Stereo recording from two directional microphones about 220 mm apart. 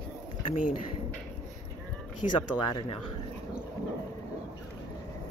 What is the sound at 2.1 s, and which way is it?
Speech, 90° left.